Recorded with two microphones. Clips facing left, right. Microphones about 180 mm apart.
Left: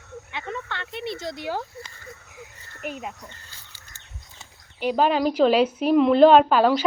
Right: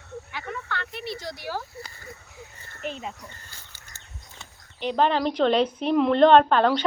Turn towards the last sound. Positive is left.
turn(degrees=5)  # may be behind; listen again after turning